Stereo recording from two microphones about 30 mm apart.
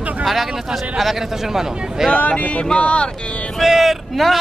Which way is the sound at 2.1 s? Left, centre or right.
Left.